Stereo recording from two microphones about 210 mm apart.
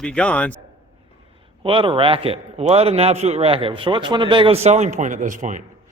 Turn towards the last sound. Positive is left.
turn(degrees=-35)  # may be behind; listen again after turning